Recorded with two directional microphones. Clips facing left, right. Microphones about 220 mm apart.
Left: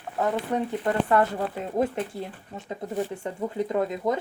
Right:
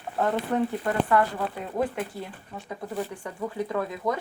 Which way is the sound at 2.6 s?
25° left (ahead or behind).